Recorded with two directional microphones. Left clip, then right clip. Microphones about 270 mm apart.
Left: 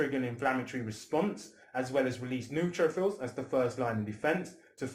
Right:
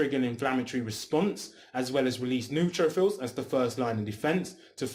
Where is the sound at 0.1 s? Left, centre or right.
Right.